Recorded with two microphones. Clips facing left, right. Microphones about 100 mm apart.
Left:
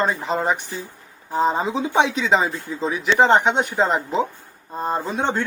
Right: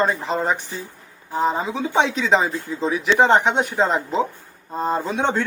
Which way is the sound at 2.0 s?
5° left (ahead or behind).